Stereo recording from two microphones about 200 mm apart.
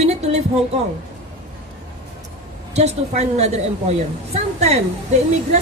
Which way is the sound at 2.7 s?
35° right (ahead or behind).